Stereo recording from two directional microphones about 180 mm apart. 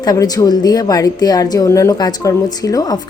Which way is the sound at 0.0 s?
20° left (ahead or behind).